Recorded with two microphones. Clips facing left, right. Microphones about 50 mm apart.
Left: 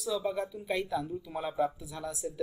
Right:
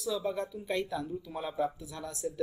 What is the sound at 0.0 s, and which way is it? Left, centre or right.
Speech, centre.